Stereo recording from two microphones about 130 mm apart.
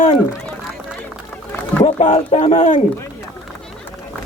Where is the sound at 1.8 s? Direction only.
60° left (ahead or behind).